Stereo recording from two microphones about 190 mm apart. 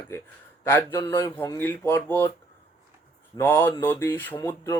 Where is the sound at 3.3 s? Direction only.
15° left (ahead or behind).